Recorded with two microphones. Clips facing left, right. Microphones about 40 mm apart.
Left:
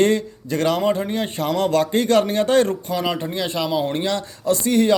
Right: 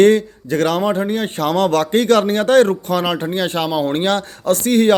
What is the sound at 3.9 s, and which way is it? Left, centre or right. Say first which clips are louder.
Speech: right 5 dB; right.